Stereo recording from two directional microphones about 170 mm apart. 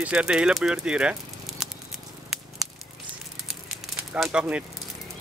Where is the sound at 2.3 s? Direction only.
Centre (ahead or behind).